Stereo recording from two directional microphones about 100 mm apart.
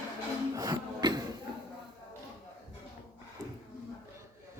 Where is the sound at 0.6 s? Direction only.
45° right (ahead or behind).